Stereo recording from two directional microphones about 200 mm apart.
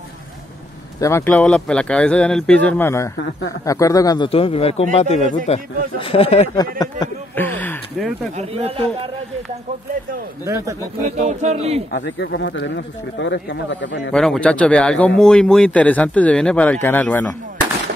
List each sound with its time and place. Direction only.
1.0 s a man's voice: 10° left (ahead or behind); by 6.5 s 30° left (ahead or behind)
6.5 s speech: 20° left (ahead or behind)
8.4 s speech: 30° right (ahead or behind)
10.4 s speech: 15° right (ahead or behind)
11.0 s speech: 35° right (ahead or behind)
11.9 s speech: 65° left (ahead or behind)
14.1 s speech: 5° left (ahead or behind)